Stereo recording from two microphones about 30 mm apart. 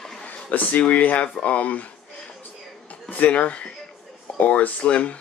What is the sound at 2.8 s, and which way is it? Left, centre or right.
Speech, left.